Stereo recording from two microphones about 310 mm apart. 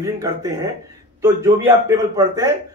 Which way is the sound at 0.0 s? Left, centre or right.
Centre.